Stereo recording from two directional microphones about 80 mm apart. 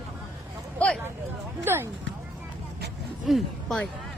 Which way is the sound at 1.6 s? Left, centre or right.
Right.